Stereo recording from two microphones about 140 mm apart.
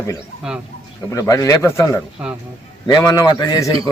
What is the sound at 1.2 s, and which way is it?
Speech, 25° left (ahead or behind).